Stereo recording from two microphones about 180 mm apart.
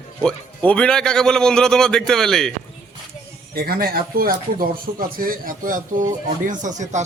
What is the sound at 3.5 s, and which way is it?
Speech, 55° right (ahead or behind).